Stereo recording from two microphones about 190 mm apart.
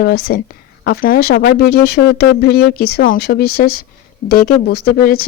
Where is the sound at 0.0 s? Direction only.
55° left (ahead or behind).